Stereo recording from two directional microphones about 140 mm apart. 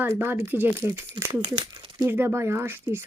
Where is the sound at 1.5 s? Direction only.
35° right (ahead or behind).